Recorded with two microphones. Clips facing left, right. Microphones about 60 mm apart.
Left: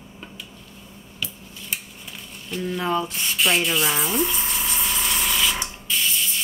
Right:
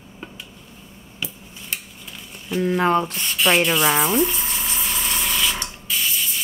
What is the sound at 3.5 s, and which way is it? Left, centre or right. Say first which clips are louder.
Speech: right 5 dB; right.